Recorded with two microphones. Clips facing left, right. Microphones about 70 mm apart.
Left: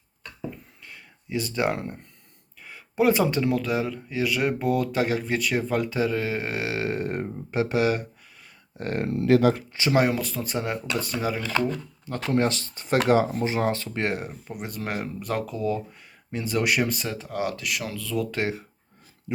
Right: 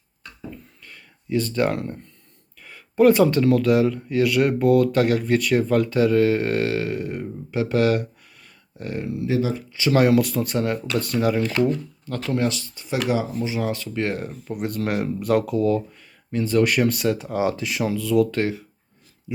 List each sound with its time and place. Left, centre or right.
0.5 s a sound: centre
2.6 s speech: centre
6.7 s speech: left
7.6 s speech: centre
8.8 s speech: left
9.2 s speech: left
9.7 s speech: left
10.0 s speech: centre
12.0 s speech: left
14.2 s speech: centre
16.3 s speech: centre
17.2 s speech: centre
18.4 s speech: centre